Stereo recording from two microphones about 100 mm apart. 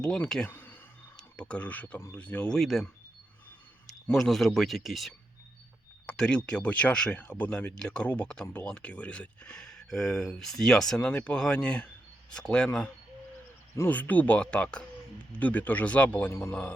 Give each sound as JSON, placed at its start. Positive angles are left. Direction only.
{"t": 0.0, "sound": "speech", "side_deg": 10}
{"t": 0.4, "sound": "a sound", "side_deg": 20}
{"t": 1.1, "sound": "speech", "side_deg": 10}
{"t": 2.6, "sound": "speech", "side_deg": 0}
{"t": 3.8, "sound": "speech", "side_deg": 0}
{"t": 6.1, "sound": "speech", "side_deg": 10}